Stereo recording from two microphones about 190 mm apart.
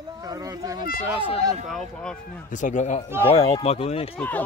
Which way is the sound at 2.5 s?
40° left (ahead or behind).